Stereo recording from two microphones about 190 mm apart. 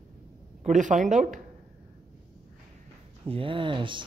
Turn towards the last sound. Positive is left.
turn(degrees=-25)  # may be behind; listen again after turning